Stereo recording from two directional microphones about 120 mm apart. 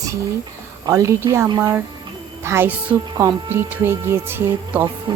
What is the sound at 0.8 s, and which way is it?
Speech, 25° right (ahead or behind).